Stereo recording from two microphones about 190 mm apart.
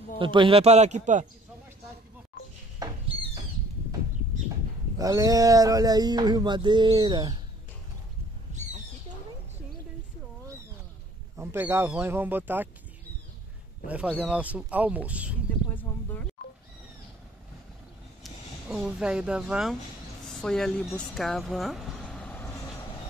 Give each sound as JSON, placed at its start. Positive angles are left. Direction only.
{"t": 0.2, "sound": "speech", "side_deg": -25}
{"t": 2.8, "sound": "owl", "side_deg": -20}
{"t": 4.9, "sound": "speech", "side_deg": -20}
{"t": 11.3, "sound": "speech", "side_deg": -10}
{"t": 13.8, "sound": "speech", "side_deg": -5}
{"t": 15.7, "sound": "speech", "side_deg": 10}
{"t": 18.2, "sound": "speech", "side_deg": -5}